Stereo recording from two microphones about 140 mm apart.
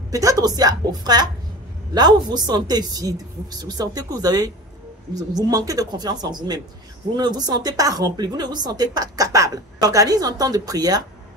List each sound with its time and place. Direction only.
0.1 s speech: 25° right (ahead or behind)